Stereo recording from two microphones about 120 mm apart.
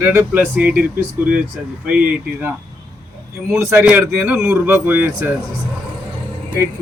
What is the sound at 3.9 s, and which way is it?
Speech, 10° right (ahead or behind).